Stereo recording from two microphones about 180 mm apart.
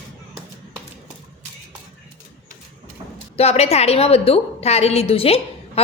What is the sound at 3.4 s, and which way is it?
A woman's voice, 35° left (ahead or behind).